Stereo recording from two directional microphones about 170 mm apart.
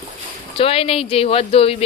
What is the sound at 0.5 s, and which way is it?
Speech, 35° left (ahead or behind).